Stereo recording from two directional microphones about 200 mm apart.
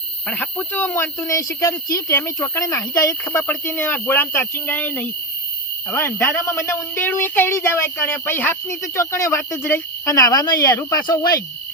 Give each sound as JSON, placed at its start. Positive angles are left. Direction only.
{"t": 0.3, "sound": "speech", "side_deg": 10}